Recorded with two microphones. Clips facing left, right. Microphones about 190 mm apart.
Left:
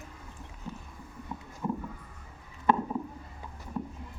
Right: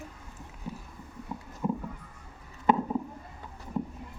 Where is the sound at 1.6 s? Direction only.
15° right (ahead or behind).